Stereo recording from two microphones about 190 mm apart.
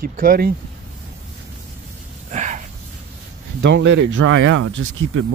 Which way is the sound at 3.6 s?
70° right (ahead or behind).